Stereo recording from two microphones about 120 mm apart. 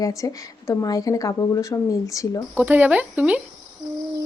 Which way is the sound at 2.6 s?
15° right (ahead or behind).